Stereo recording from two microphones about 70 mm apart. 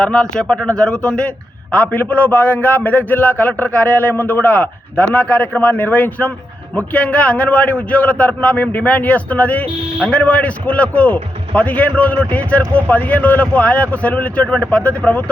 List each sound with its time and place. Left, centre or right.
0.0 s a man's voice: centre